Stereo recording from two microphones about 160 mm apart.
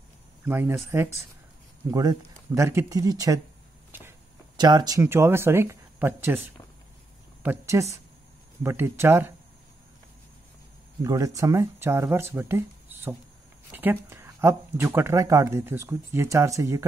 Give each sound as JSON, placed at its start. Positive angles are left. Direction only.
{"t": 0.5, "sound": "speech", "side_deg": -15}
{"t": 4.6, "sound": "speech", "side_deg": -25}
{"t": 7.4, "sound": "speech", "side_deg": -15}
{"t": 11.1, "sound": "speech", "side_deg": -20}